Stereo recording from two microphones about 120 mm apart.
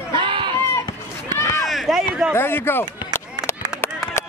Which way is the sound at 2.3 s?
20° left (ahead or behind).